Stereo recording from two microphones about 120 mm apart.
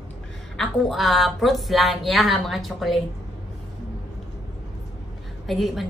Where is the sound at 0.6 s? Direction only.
Centre (ahead or behind).